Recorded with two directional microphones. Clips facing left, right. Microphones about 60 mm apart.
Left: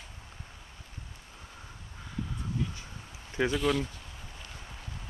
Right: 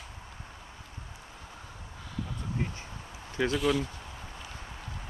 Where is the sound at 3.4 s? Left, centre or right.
Centre.